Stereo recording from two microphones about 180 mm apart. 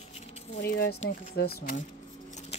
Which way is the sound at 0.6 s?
60° left (ahead or behind).